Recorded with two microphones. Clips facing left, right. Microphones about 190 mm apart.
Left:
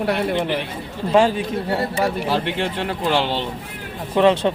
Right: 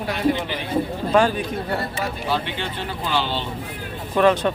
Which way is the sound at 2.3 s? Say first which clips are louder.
Left 4 dB; 85° left.